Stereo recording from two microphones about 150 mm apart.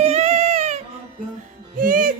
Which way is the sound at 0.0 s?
45° right (ahead or behind).